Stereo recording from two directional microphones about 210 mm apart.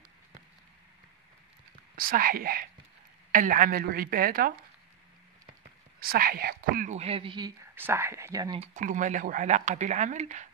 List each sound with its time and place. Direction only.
2.0 s a woman's voice: 45° right (ahead or behind)
5.9 s speech: 45° right (ahead or behind); by 7.5 s 20° right (ahead or behind)
7.7 s speech: 10° right (ahead or behind)
8.5 s speech: 35° right (ahead or behind)